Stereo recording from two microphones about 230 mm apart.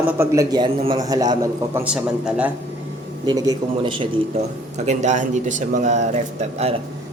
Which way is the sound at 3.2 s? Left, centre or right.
Centre.